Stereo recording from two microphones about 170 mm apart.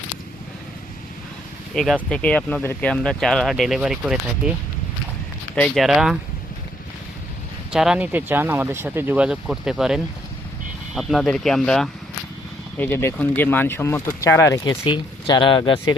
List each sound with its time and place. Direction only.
1.7 s speech: centre (ahead or behind)
5.5 s speech: 5° left (ahead or behind)
7.7 s speech: 5° right (ahead or behind)
12.8 s speech: 15° left (ahead or behind)
14.7 s speech: 30° left (ahead or behind)